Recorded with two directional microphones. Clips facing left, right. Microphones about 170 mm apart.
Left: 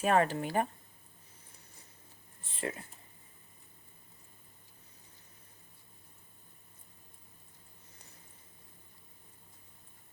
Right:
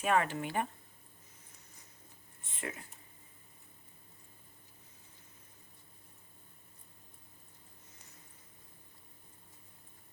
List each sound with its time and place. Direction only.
0.0 s speech: 35° left (ahead or behind)
2.4 s speech: 30° left (ahead or behind)